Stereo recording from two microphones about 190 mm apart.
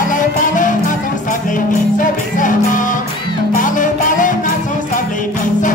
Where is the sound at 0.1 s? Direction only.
45° left (ahead or behind).